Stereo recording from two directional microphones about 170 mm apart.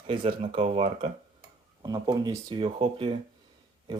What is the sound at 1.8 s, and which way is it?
Speech, 25° right (ahead or behind).